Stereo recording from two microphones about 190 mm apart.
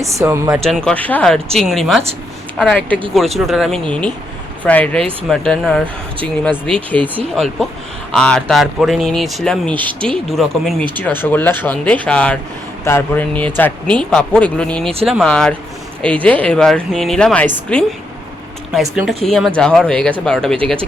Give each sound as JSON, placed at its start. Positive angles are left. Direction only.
{"t": 0.0, "sound": "speech", "side_deg": -15}
{"t": 0.6, "sound": "speech", "side_deg": 5}
{"t": 7.0, "sound": "speech", "side_deg": -30}
{"t": 8.1, "sound": "speech", "side_deg": 5}